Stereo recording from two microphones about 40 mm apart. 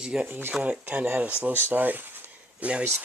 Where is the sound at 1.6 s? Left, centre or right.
Right.